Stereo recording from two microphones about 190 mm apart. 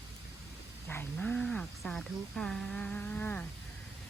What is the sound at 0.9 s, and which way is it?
Speech, 10° left (ahead or behind).